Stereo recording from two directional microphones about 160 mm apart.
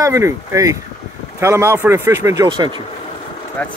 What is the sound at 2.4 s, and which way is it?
Speech, 30° right (ahead or behind).